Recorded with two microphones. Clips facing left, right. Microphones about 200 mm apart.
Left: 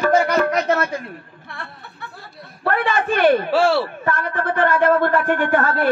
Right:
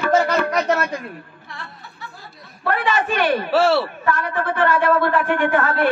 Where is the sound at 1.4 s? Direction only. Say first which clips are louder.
Left 4 dB; 55° left (ahead or behind).